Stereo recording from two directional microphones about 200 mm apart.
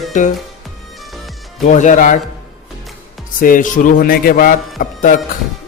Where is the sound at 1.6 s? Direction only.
40° left (ahead or behind).